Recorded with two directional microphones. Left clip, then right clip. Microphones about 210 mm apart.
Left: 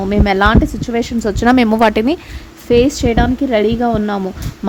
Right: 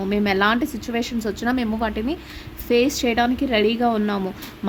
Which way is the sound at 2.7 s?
30° left (ahead or behind).